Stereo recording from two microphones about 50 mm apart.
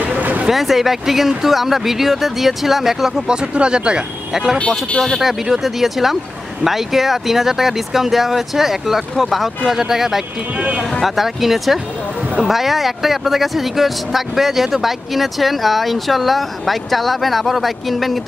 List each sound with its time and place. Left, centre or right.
0.0 s a sound: right
0.5 s speech: centre
3.3 s speech: centre
4.6 s speech: centre
5.2 s speech: centre